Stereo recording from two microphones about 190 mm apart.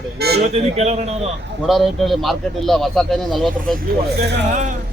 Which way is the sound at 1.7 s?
Centre (ahead or behind).